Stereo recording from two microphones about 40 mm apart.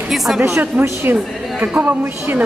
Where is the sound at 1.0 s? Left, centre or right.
Right.